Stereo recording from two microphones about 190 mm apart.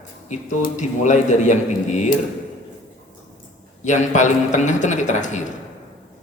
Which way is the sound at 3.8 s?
40° left (ahead or behind).